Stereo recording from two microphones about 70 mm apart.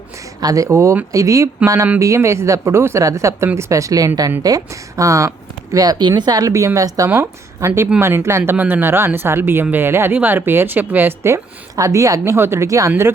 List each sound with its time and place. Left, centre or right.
0.3 s speech: right
5.7 s speech: right
6.4 s a woman's voice: right
7.1 s speech: right
11.8 s speech: right